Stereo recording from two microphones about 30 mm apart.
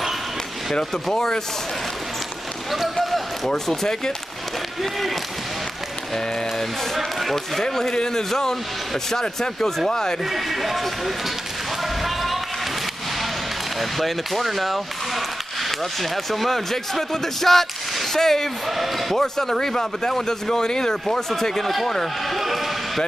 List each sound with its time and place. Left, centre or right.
1.1 s speech: centre
2.7 s speech: centre
3.4 s speech: centre
7.0 s speech: centre
7.9 s speech: left
10.3 s speech: centre
12.0 s basketball bounce: centre
13.7 s speech: centre
18.7 s speech: centre
19.1 s speech: centre
22.3 s basketball bounce: centre